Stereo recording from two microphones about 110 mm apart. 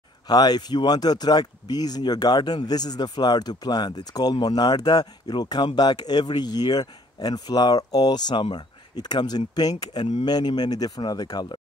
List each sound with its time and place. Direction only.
0.3 s speech: 40° left (ahead or behind)